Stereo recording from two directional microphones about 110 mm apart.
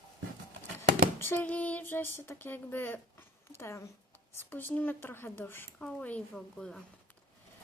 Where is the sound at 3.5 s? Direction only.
25° left (ahead or behind); by 6.8 s 5° left (ahead or behind).